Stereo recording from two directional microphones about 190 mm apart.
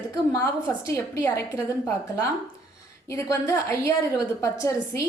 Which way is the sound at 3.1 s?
15° left (ahead or behind).